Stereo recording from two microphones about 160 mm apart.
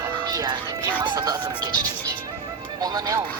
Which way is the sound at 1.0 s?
25° right (ahead or behind).